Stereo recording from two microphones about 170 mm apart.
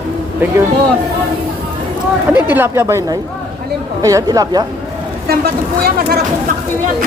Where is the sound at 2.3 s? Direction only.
10° right (ahead or behind).